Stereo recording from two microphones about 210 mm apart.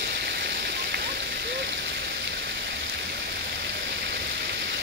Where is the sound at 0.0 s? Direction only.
50° right (ahead or behind).